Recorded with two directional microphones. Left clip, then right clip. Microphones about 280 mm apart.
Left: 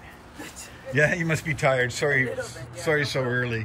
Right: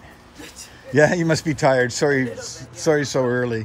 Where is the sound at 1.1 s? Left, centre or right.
Right.